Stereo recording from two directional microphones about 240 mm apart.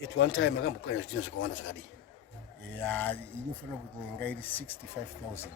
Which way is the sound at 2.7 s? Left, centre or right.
Centre.